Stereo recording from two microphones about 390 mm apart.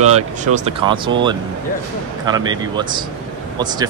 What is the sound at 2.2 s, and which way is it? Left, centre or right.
Speech, centre.